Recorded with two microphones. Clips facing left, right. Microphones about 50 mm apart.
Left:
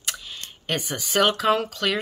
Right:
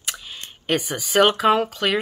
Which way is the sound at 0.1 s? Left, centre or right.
Centre.